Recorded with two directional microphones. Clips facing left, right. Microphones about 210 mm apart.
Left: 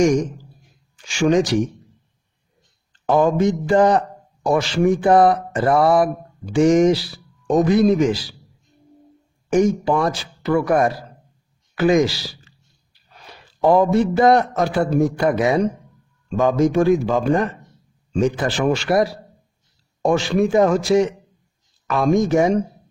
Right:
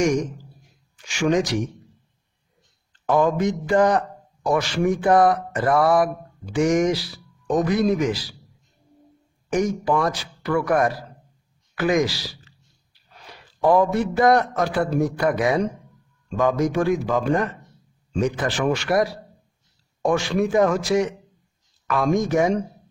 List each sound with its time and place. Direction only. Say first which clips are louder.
1.0 s speech: left 4 dB; 30° left (ahead or behind)
3.1 s a man's voice: left 3 dB; 30° left (ahead or behind)
9.5 s a man's voice: left 4 dB; 25° left (ahead or behind)
13.6 s a man's voice: left 3 dB; 25° left (ahead or behind)